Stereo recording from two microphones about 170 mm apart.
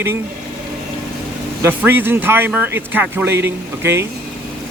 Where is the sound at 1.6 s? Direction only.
10° right (ahead or behind).